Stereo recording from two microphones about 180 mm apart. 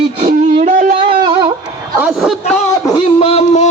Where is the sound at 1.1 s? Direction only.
25° right (ahead or behind).